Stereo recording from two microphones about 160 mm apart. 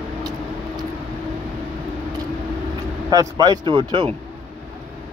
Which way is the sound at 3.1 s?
25° right (ahead or behind).